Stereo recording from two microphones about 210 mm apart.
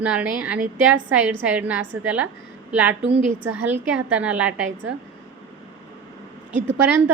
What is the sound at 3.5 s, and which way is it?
A woman's voice, 5° right (ahead or behind).